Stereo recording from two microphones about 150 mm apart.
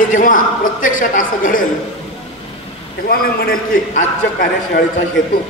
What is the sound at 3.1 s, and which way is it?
A man's voice, 80° left.